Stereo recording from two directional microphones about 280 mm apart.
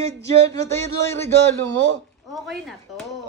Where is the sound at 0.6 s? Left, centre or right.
Centre.